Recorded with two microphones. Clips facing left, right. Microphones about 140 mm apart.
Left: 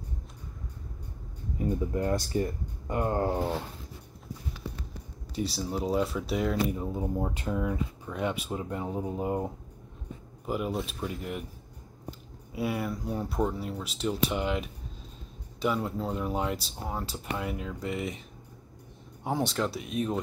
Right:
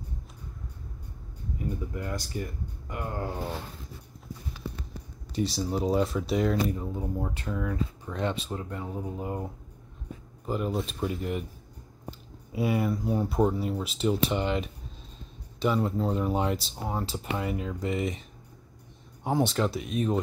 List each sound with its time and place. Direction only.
1.6 s speech: 35° left (ahead or behind)
5.3 s speech: 5° left (ahead or behind)
6.8 s speech: 15° left (ahead or behind)
10.4 s speech: 5° left (ahead or behind)
12.5 s speech: centre (ahead or behind)
16.7 s speech: 10° right (ahead or behind)
17.1 s speech: centre (ahead or behind)
19.2 s speech: centre (ahead or behind)